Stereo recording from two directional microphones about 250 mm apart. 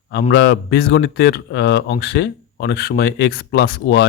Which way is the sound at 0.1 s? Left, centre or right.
Left.